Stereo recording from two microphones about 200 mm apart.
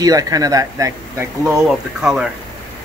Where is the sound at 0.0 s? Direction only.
20° right (ahead or behind).